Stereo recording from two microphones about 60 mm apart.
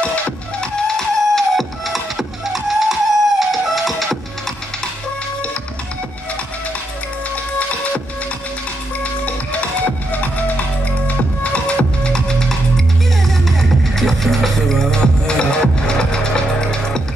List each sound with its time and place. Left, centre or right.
0.6 s music: centre
9.0 s music: left
11.1 s music: left